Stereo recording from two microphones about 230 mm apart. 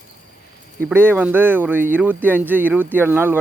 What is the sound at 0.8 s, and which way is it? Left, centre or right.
Speech, centre.